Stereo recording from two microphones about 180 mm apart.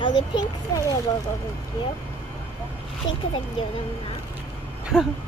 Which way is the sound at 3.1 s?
90° left.